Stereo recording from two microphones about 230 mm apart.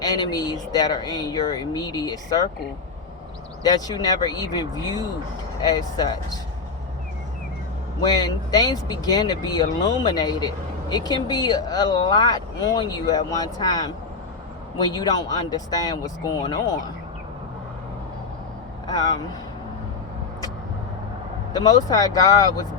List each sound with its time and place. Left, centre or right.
0.0 s speech: centre
3.6 s speech: centre
8.0 s speech: centre
18.9 s speech: centre
21.5 s speech: centre